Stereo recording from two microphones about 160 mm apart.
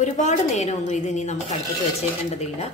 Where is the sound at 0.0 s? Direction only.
50° left (ahead or behind).